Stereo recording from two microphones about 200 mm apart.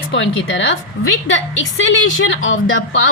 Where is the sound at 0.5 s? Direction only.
65° left (ahead or behind).